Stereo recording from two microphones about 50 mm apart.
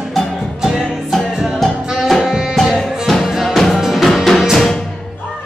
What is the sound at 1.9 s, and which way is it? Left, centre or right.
Music, centre.